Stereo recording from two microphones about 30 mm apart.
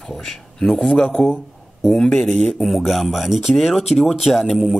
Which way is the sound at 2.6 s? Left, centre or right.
Centre.